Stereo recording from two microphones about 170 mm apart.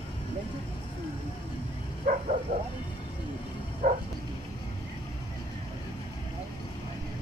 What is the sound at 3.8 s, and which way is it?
Dog, 55° right (ahead or behind).